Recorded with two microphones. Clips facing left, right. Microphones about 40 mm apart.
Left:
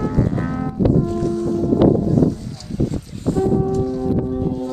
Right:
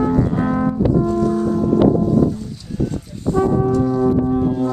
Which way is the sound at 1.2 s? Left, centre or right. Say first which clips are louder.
Right 2 dB; right.